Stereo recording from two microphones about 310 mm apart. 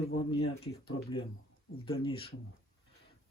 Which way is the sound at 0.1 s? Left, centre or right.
Centre.